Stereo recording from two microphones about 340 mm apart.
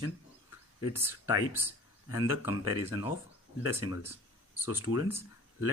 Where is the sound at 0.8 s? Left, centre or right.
Centre.